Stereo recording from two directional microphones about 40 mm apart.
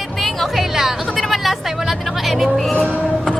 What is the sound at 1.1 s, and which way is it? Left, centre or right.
Speech, centre.